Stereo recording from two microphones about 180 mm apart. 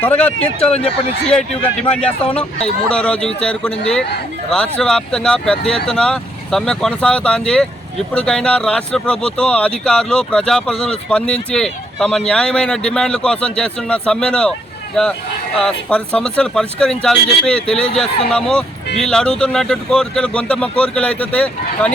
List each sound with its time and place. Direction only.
0.0 s speech: 10° left (ahead or behind)
0.6 s speech: 35° left (ahead or behind)
2.9 s speech: 5° left (ahead or behind)
15.5 s speech: 5° left (ahead or behind)